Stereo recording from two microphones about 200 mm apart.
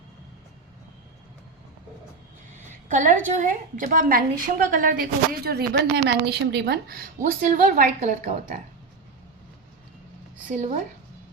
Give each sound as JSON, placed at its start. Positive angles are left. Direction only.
{"t": 2.6, "sound": "a sound", "side_deg": -40}
{"t": 3.2, "sound": "a woman's voice", "side_deg": -40}
{"t": 10.5, "sound": "a woman's voice", "side_deg": -35}